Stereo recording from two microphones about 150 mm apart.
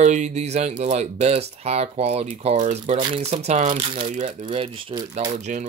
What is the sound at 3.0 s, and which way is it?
Speech, 35° right (ahead or behind).